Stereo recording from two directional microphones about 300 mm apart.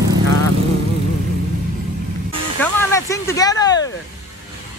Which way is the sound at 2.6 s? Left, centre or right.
Centre.